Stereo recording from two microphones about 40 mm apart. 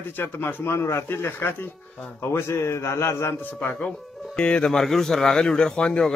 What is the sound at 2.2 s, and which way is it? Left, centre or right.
A man's voice, left.